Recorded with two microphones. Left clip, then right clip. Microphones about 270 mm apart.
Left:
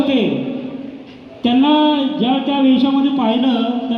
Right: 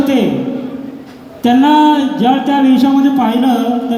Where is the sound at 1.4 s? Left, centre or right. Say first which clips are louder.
Right 5 dB; right.